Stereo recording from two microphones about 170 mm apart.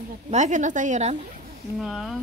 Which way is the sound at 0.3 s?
45° right (ahead or behind).